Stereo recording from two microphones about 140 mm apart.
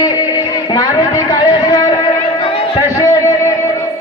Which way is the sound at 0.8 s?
25° left (ahead or behind).